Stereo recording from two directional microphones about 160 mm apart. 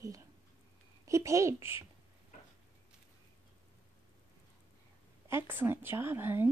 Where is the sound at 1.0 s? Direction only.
20° right (ahead or behind).